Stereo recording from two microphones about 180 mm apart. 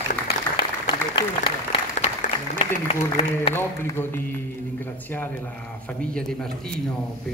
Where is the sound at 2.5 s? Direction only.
35° left (ahead or behind).